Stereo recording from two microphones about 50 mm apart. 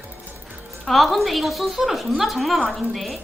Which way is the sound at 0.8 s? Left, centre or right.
Centre.